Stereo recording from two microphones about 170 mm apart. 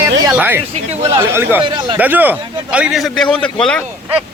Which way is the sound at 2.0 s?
10° right (ahead or behind).